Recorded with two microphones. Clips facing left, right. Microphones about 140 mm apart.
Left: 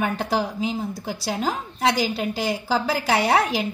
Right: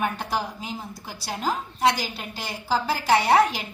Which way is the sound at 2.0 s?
90° left.